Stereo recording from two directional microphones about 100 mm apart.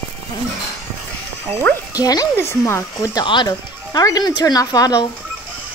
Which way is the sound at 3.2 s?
50° left (ahead or behind).